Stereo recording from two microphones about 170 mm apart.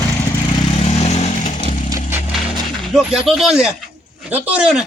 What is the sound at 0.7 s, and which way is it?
Vehicle, 40° left (ahead or behind).